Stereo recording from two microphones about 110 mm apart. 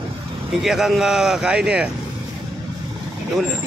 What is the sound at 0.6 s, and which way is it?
Speech, 5° right (ahead or behind).